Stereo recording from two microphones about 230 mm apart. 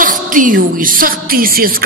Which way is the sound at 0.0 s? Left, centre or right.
Right.